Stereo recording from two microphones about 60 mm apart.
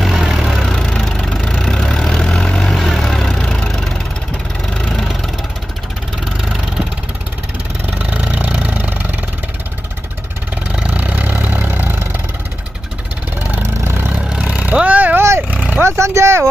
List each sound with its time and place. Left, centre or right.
0.0 s vehicle: centre
8.0 s vehicle: right
10.7 s vehicle: right
13.6 s vehicle: right
14.4 s vehicle: right
15.1 s vehicle: right
15.5 s vehicle: right
15.8 s a sound: right